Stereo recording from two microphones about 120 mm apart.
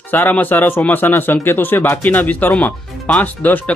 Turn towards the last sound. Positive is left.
turn(degrees=15)  # may be behind; listen again after turning